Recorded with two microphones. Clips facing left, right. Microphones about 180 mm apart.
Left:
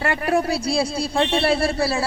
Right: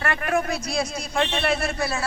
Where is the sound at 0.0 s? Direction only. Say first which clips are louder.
Left 4 dB; 30° left (ahead or behind).